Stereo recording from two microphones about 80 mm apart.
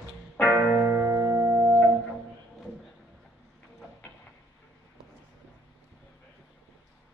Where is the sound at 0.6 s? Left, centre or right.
Right.